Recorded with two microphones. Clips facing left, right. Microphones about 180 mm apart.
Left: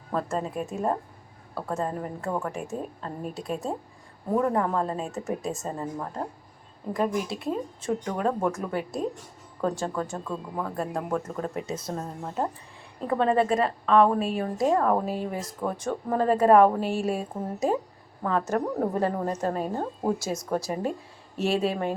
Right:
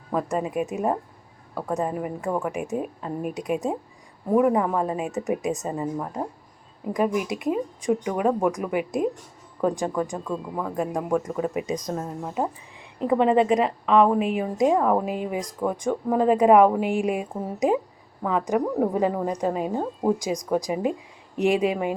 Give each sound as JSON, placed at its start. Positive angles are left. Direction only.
{"t": 0.1, "sound": "a woman's voice", "side_deg": -10}